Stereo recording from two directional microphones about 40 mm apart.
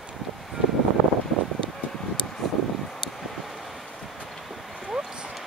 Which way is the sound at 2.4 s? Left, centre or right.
Centre.